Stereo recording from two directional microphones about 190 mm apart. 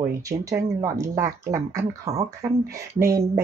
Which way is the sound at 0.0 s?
15° right (ahead or behind).